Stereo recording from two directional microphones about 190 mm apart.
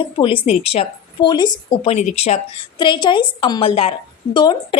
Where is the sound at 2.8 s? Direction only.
25° left (ahead or behind).